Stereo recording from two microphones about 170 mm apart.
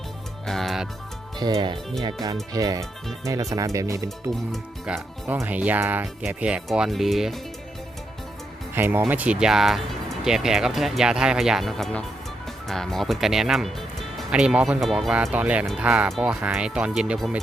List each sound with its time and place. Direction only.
0.4 s music: centre (ahead or behind)
1.4 s speech: 25° right (ahead or behind)
4.5 s speech: centre (ahead or behind)
8.7 s speech: 10° right (ahead or behind)